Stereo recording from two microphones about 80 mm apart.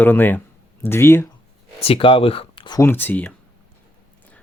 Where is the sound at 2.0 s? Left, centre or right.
Left.